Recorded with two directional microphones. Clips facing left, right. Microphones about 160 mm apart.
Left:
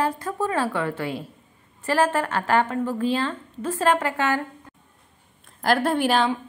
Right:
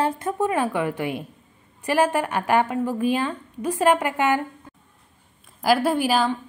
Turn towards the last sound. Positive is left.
turn(degrees=0)  # may be behind; listen again after turning